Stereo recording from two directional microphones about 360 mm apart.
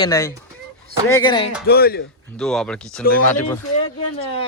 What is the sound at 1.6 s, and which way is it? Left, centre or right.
Speech, left.